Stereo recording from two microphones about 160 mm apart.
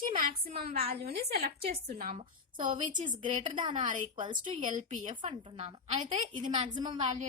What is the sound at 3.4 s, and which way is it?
Speech, 30° right (ahead or behind).